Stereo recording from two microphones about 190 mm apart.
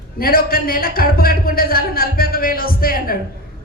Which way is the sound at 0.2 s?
50° left (ahead or behind).